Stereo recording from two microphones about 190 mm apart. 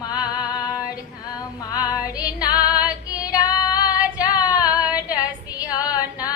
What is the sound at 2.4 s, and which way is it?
Female singing, 20° left (ahead or behind).